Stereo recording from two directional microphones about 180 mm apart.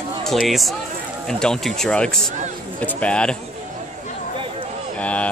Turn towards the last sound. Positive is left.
turn(degrees=5)  # may be behind; listen again after turning